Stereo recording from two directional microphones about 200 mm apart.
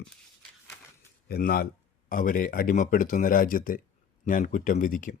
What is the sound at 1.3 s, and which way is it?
Speech, 50° left (ahead or behind).